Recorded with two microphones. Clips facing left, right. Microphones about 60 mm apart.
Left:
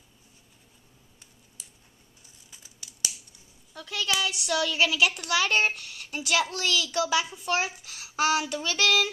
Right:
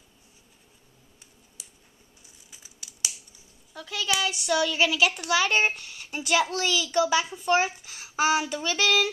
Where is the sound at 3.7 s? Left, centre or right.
Centre.